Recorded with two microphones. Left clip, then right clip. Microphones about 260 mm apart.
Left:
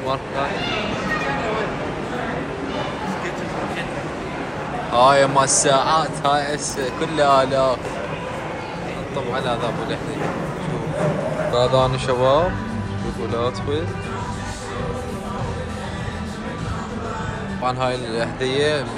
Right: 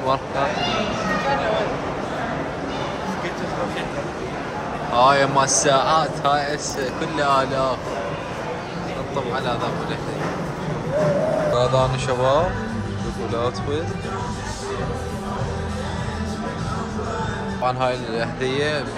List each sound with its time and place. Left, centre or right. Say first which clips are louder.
4.9 s speech: left 2 dB; centre
11.5 s speech: left 2 dB; centre
17.6 s speech: even; centre